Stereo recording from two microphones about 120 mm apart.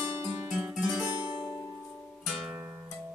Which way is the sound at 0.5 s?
10° right (ahead or behind).